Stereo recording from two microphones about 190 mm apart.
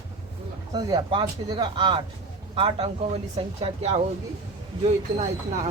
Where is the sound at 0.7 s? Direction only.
25° right (ahead or behind); by 5.7 s 40° right (ahead or behind).